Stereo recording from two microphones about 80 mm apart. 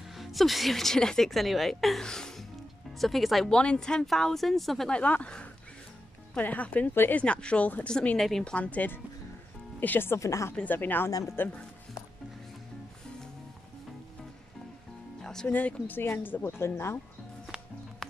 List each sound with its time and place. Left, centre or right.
0.1 s a woman's voice: centre
3.5 s a woman's voice: centre
8.2 s speech: centre
8.5 s a woman's voice: centre; by 10.5 s left
10.5 s a woman's voice: left
11.1 s speech: left
11.3 s a woman's voice: left
15.4 s a woman's voice: left
17.5 s music: centre